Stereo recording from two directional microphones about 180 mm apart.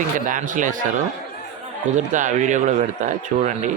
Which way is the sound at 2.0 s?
45° right (ahead or behind).